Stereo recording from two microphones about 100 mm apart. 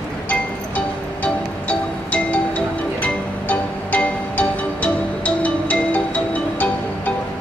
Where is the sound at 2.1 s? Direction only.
15° left (ahead or behind).